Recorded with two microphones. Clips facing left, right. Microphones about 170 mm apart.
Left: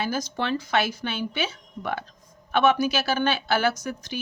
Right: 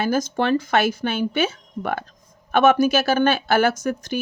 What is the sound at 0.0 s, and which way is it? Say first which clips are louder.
Speech: right 7 dB; 50° right (ahead or behind).